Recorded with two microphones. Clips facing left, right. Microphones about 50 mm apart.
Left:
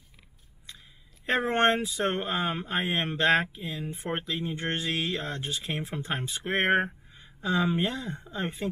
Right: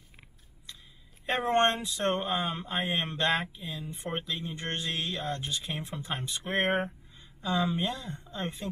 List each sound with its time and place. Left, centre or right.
1.2 s speech: centre
6.8 s a sound: centre
7.6 s speech: left
8.2 s speech: centre